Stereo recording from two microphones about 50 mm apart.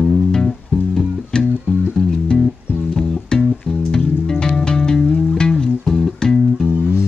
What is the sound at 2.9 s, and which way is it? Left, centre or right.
Music, centre.